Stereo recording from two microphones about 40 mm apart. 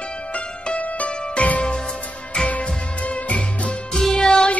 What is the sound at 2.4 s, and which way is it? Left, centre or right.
Music, left.